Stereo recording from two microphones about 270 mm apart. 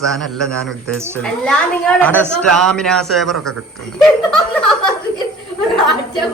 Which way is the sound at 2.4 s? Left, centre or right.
Right.